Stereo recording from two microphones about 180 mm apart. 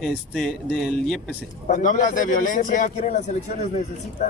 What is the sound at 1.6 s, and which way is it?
A man's voice, 45° left (ahead or behind).